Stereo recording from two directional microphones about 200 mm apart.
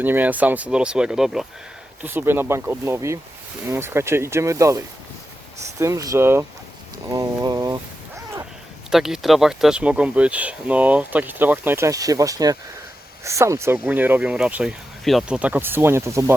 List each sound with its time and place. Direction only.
0.0 s speech: 10° right (ahead or behind)
8.9 s speech: centre (ahead or behind)